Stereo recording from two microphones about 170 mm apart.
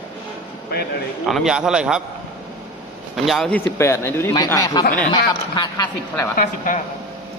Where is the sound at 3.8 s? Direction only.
15° left (ahead or behind).